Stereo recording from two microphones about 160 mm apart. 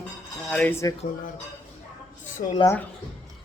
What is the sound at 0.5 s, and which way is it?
Speech, 10° left (ahead or behind).